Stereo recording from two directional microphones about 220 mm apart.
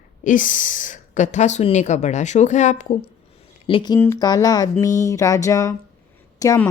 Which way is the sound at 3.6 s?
20° left (ahead or behind).